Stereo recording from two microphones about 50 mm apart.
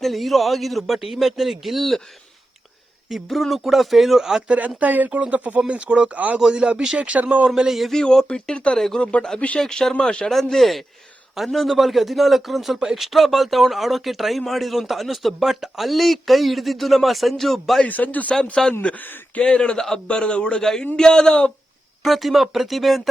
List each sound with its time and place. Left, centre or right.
0.0 s a man's voice: centre
3.2 s a man's voice: centre
4.4 s speech: right
6.5 s speech: centre
7.5 s speech: centre
7.9 s speech: centre
10.3 s a man's voice: centre
17.8 s speech: left
18.9 s speech: centre
20.6 s speech: centre
22.0 s a man's voice: centre